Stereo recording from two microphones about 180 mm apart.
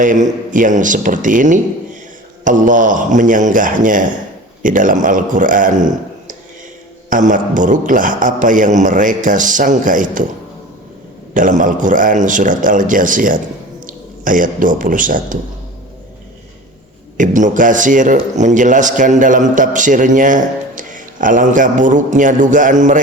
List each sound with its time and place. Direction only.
0.0 s a man's voice: 45° right (ahead or behind)
11.3 s a man's voice: 45° right (ahead or behind)
17.2 s a man's voice: 45° right (ahead or behind)